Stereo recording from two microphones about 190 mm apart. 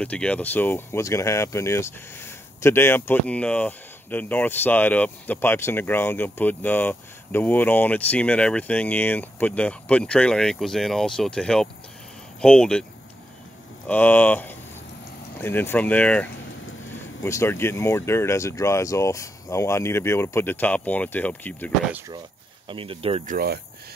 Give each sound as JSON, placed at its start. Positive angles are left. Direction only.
{"t": 0.0, "sound": "speech", "side_deg": 5}
{"t": 13.8, "sound": "speech", "side_deg": 10}
{"t": 22.7, "sound": "speech", "side_deg": -30}
{"t": 23.2, "sound": "speech", "side_deg": -55}